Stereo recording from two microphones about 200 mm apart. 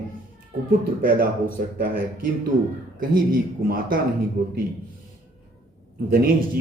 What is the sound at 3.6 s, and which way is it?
Speech, 45° right (ahead or behind).